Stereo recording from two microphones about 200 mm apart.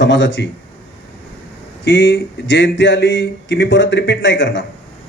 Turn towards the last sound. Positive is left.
turn(degrees=65)  # may be behind; listen again after turning